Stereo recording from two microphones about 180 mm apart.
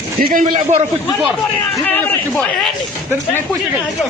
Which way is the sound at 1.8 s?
5° left (ahead or behind).